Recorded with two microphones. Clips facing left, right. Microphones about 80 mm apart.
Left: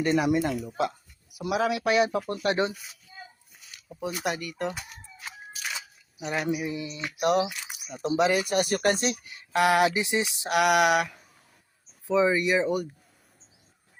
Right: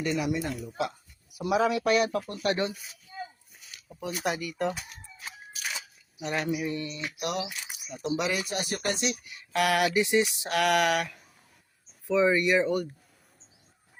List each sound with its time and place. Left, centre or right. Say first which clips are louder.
0.0 s speech: left 5 dB; left
1.3 s speech: right 1 dB; centre
2.0 s speech: left 2 dB; left
4.2 s speech: right 2 dB; centre
6.2 s speech: left 1 dB; centre
7.2 s speech: left 9 dB; left
8.4 s speech: left 7 dB; left
9.5 s speech: left 3 dB; centre